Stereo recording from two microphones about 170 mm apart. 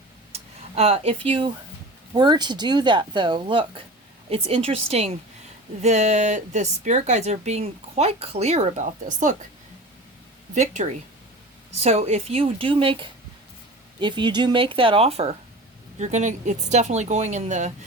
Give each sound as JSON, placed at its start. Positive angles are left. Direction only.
{"t": 0.3, "sound": "speech", "side_deg": -35}
{"t": 10.5, "sound": "speech", "side_deg": -45}